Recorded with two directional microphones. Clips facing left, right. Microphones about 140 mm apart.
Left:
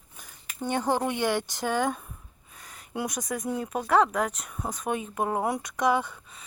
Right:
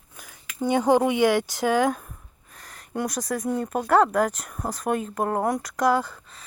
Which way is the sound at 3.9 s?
Centre (ahead or behind).